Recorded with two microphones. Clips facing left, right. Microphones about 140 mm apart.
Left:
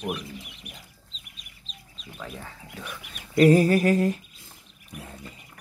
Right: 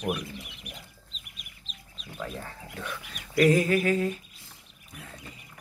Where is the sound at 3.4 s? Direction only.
35° left (ahead or behind).